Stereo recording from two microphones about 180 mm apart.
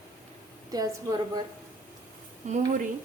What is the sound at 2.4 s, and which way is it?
Speech, 40° right (ahead or behind).